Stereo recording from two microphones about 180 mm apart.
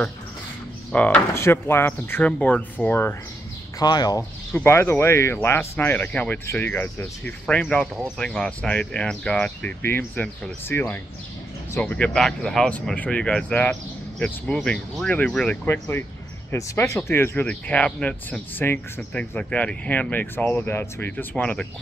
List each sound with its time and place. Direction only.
0.9 s speech: 10° left (ahead or behind)
3.8 s speech: 20° left (ahead or behind)
4.2 s speech: 10° left (ahead or behind)